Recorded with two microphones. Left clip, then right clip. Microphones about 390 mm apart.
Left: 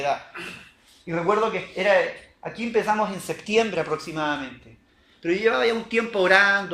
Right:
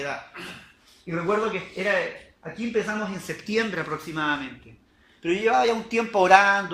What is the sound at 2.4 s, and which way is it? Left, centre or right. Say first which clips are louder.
A man's voice: left 4 dB; centre.